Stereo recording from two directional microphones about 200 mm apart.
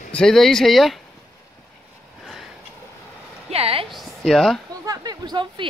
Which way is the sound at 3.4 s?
30° right (ahead or behind).